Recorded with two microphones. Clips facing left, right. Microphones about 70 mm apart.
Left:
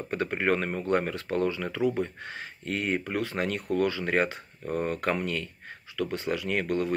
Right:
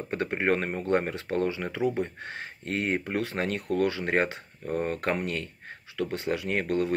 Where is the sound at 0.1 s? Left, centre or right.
Right.